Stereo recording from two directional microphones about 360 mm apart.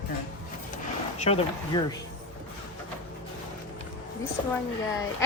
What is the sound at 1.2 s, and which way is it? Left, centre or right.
Speech, centre.